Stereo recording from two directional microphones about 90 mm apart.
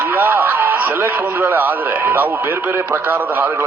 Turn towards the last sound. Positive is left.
turn(degrees=-20)  # may be behind; listen again after turning